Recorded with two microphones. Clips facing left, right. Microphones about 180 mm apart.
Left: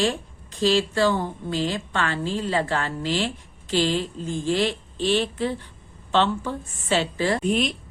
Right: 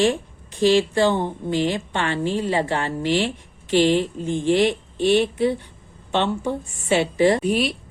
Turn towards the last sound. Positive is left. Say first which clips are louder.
# right 2 dB
turn(degrees=-5)  # may be behind; listen again after turning